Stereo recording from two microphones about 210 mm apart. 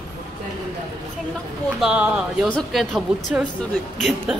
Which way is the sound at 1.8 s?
5° right (ahead or behind).